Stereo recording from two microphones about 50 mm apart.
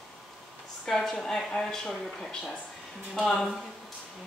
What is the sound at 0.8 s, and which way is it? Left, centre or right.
Speech, centre.